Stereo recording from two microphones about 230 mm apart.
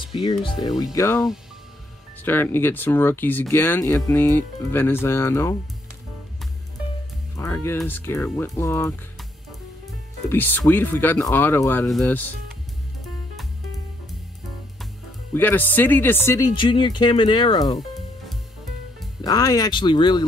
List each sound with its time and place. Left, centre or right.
0.0 s speech: left
2.2 s speech: centre
7.3 s speech: centre
10.3 s speech: centre
15.3 s speech: centre
19.2 s speech: centre